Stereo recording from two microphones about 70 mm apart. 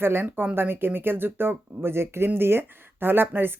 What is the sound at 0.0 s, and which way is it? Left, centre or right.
Speech, right.